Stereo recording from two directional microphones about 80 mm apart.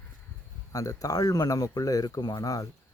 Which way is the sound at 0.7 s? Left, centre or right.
Left.